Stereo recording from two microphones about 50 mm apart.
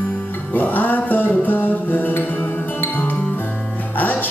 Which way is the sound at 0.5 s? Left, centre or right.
Left.